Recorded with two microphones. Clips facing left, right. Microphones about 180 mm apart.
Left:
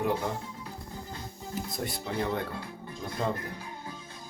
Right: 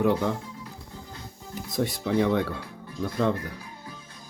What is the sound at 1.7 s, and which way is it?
Speech, 80° right.